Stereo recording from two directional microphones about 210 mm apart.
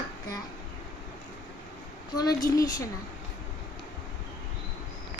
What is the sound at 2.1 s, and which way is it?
Speech, 15° left (ahead or behind).